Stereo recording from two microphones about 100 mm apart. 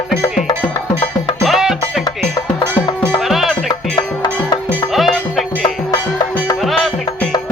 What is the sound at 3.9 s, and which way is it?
Music, 45° left (ahead or behind).